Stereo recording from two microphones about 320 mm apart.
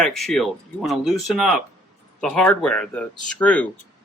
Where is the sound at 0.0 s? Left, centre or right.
Centre.